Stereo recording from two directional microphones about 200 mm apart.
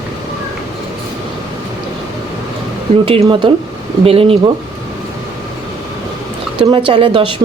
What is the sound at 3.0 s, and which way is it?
Speech, 25° right (ahead or behind).